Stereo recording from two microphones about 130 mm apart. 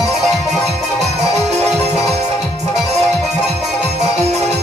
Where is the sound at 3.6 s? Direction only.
60° right (ahead or behind).